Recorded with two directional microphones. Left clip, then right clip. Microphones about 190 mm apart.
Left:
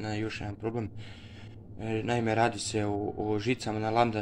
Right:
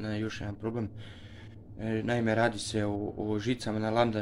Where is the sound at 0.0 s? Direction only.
10° right (ahead or behind).